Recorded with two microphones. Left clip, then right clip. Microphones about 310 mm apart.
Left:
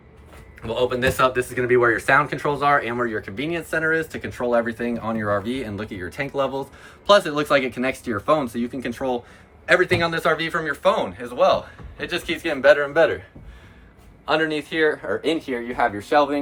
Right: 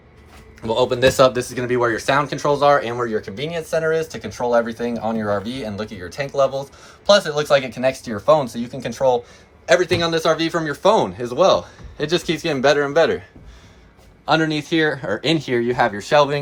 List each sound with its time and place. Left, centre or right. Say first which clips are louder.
0.6 s speech: right 5 dB; centre
14.3 s speech: right 3 dB; right